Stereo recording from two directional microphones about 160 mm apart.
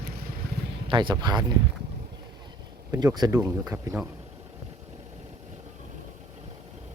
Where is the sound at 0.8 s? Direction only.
30° right (ahead or behind).